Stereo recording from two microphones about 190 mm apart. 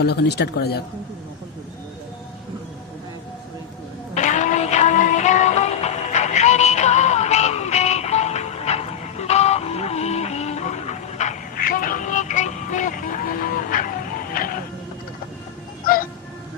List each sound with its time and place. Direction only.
0.0 s speech: 60° left (ahead or behind)
4.1 s music: 40° left (ahead or behind)